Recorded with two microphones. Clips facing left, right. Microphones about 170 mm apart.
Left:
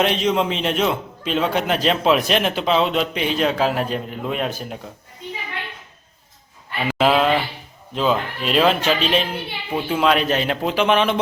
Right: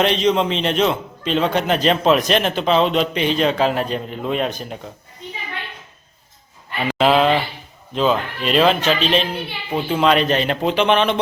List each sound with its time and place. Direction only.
0.0 s a man's voice: 5° left (ahead or behind)
6.8 s a man's voice: 5° left (ahead or behind)